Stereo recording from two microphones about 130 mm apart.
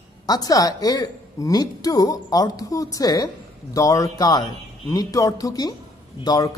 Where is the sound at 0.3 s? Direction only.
30° left (ahead or behind).